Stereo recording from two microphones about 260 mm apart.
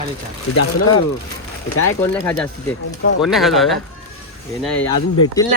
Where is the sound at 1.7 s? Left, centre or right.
Left.